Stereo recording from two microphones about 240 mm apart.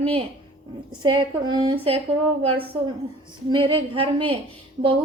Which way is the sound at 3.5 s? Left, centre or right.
Right.